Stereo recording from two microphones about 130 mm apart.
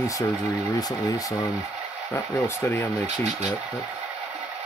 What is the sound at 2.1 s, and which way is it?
Speech, 20° left (ahead or behind).